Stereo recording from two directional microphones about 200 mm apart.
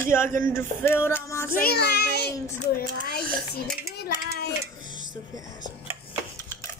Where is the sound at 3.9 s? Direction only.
50° left (ahead or behind).